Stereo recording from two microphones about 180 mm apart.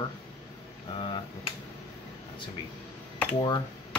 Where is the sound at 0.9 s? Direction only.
25° left (ahead or behind).